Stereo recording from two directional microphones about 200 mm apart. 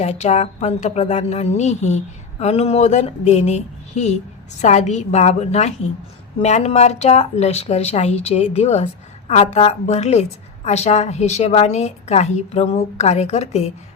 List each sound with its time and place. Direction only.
0.0 s speech: 35° left (ahead or behind)